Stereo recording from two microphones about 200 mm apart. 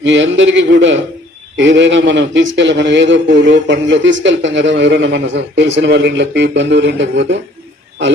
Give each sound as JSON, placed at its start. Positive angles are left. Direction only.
{"t": 0.0, "sound": "a man's voice", "side_deg": -65}